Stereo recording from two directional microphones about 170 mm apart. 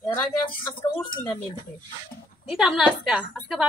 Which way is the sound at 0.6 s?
10° left (ahead or behind).